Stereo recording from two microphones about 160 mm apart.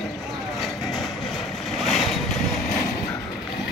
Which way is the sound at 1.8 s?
Centre (ahead or behind).